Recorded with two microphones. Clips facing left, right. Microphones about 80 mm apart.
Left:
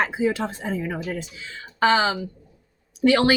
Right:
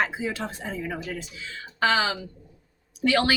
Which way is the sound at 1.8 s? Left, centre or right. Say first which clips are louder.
Left 4 dB; left.